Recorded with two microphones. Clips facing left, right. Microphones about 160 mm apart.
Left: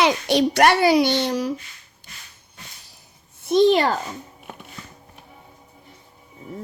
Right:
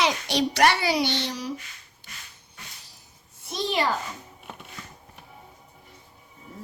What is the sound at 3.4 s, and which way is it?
Speech, 55° left (ahead or behind).